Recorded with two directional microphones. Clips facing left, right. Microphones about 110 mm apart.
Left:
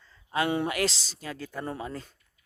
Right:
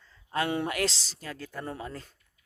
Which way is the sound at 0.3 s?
10° left (ahead or behind).